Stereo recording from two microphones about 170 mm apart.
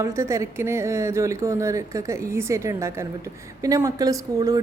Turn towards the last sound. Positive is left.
turn(degrees=-20)  # may be behind; listen again after turning